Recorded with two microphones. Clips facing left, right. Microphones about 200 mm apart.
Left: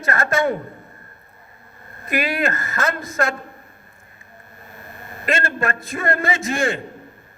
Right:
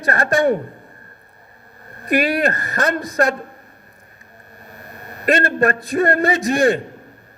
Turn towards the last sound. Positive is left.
turn(degrees=-35)  # may be behind; listen again after turning